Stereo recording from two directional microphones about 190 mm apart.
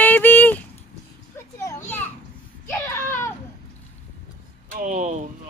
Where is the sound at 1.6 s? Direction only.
15° left (ahead or behind).